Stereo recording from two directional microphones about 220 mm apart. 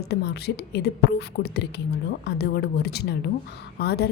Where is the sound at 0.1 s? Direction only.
50° left (ahead or behind).